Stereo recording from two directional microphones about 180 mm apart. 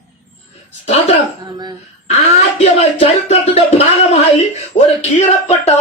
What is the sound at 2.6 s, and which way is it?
Speech, 35° left (ahead or behind).